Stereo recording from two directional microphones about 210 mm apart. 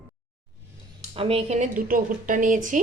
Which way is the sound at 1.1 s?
25° right (ahead or behind).